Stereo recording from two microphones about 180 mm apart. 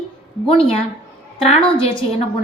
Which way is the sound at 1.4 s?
30° left (ahead or behind).